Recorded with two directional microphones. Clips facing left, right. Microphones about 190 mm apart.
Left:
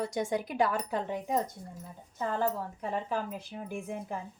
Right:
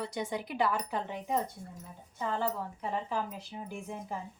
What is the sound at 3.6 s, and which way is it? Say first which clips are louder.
Speech: left 3 dB; 55° left (ahead or behind).